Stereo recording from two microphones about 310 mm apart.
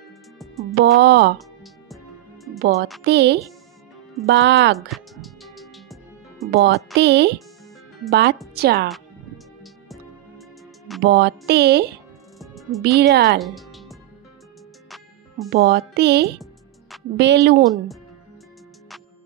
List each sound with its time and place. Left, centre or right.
0.4 s music: centre
0.9 s speech: right
3.0 s speech: right
4.7 s music: centre
6.5 s speech: right
11.0 s speech: right
12.4 s music: centre
12.8 s speech: right
13.4 s music: centre
15.5 s speech: right